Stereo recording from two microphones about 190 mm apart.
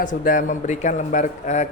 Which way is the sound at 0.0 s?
45° left (ahead or behind).